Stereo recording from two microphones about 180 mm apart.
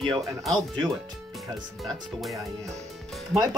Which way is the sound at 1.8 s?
Centre (ahead or behind).